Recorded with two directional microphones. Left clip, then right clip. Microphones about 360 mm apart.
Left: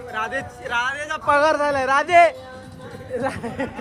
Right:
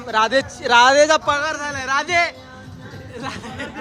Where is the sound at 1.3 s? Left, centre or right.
Centre.